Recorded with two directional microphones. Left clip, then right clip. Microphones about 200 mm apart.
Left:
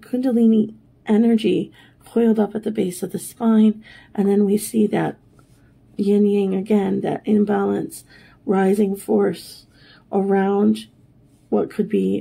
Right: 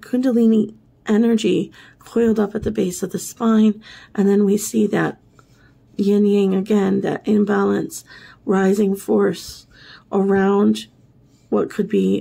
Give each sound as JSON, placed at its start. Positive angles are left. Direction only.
{"t": 0.0, "sound": "speech", "side_deg": -15}